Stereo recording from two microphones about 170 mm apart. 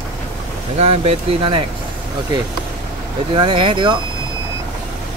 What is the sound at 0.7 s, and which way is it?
Speech, 35° right (ahead or behind).